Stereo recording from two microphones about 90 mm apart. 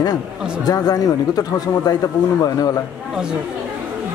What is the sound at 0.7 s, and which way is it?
Speech, 45° left (ahead or behind).